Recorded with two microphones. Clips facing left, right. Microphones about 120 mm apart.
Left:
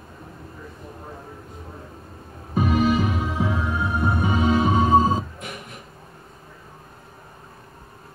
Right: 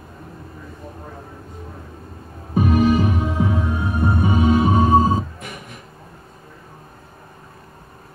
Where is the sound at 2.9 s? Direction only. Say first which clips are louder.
Right 4 dB; 20° right (ahead or behind).